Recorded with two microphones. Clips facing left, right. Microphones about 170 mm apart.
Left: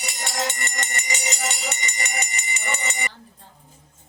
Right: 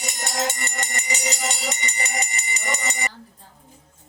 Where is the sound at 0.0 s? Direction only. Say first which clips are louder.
Right 1 dB; 40° right (ahead or behind).